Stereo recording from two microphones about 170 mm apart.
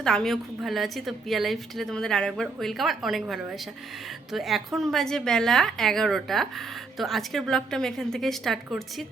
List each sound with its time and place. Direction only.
0.0 s a woman's voice: 5° left (ahead or behind)